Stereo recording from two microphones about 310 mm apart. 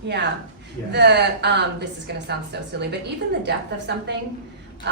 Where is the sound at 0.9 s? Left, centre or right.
Right.